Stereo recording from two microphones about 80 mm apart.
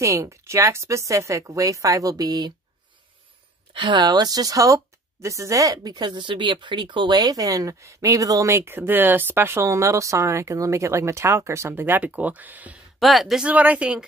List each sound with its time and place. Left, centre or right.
0.0 s speech: right
3.7 s speech: right
5.9 s speech: right; by 12.8 s centre
13.0 s speech: centre
13.5 s speech: centre